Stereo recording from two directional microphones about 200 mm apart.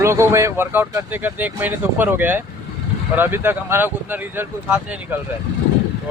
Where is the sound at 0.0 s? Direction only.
15° right (ahead or behind).